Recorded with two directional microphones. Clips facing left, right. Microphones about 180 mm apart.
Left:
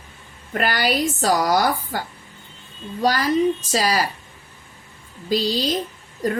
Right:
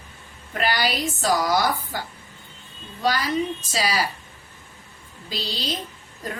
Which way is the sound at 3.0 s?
45° left (ahead or behind).